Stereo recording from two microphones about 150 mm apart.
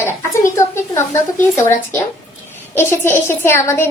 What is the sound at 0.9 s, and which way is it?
A child's voice, 15° left (ahead or behind).